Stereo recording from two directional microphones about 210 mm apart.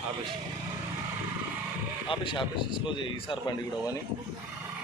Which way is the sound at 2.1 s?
25° left (ahead or behind).